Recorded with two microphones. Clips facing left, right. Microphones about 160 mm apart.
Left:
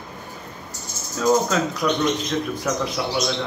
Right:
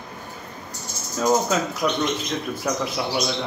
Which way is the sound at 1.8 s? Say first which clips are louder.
Left 2 dB; 15° right (ahead or behind).